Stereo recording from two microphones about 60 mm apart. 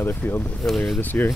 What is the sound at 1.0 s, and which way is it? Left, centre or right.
Speech, left.